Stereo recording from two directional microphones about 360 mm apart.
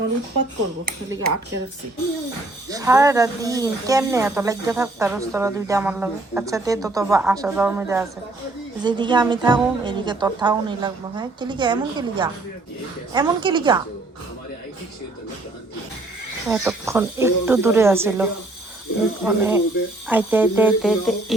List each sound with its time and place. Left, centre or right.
0.9 s speech: right
2.6 s speech: centre
16.5 s speech: centre